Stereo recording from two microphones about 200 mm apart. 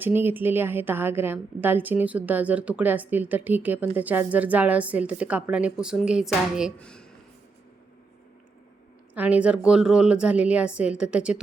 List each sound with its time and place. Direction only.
0.0 s a woman's voice: 10° right (ahead or behind)
9.1 s a woman's voice: 5° right (ahead or behind)